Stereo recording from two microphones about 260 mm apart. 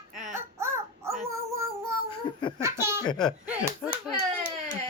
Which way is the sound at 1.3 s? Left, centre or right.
Centre.